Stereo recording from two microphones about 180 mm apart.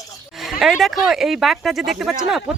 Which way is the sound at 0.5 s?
Centre (ahead or behind).